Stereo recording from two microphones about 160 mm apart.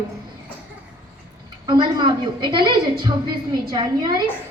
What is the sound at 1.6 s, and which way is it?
A woman's voice, 30° right (ahead or behind).